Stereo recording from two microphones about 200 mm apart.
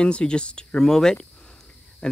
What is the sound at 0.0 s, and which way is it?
Speech, 5° left (ahead or behind).